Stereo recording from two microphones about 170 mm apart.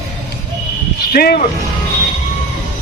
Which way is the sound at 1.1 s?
60° left (ahead or behind).